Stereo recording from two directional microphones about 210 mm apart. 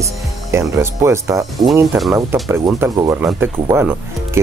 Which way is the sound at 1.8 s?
Centre (ahead or behind).